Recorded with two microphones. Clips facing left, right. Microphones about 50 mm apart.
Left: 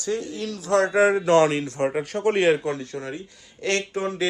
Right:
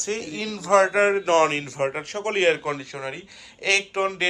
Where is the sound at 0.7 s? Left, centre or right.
Right.